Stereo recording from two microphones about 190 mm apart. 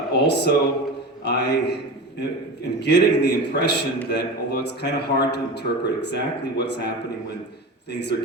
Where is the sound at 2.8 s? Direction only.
60° left (ahead or behind).